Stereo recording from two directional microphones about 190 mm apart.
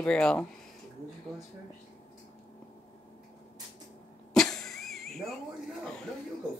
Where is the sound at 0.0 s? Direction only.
5° left (ahead or behind).